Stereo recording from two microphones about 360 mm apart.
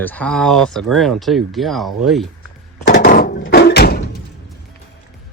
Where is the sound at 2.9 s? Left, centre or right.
Left.